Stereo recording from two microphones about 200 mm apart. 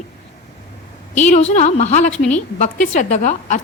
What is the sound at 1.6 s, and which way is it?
A woman's voice, 35° left (ahead or behind).